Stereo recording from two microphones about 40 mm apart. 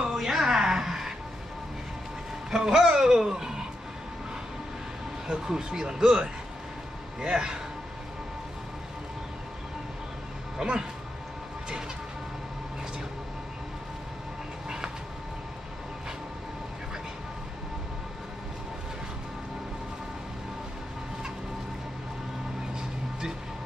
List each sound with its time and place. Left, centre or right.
0.1 s a sound: centre
2.5 s speech: centre
5.3 s speech: centre
10.6 s speech: right